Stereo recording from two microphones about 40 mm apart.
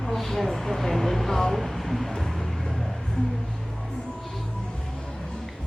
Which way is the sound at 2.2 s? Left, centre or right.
Centre.